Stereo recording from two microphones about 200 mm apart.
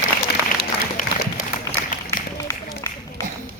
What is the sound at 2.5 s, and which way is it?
Run, 15° left (ahead or behind).